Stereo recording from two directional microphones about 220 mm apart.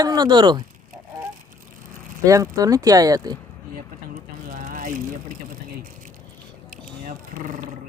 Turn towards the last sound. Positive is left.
turn(degrees=-40)  # may be behind; listen again after turning